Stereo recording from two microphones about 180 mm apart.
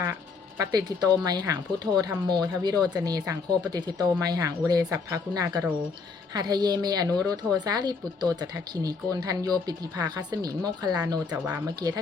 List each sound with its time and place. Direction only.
0.6 s speech: 20° right (ahead or behind)